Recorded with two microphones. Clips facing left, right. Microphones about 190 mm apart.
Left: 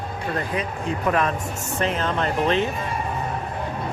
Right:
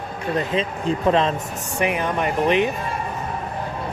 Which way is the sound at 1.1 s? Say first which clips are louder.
Right 3 dB; 25° right (ahead or behind).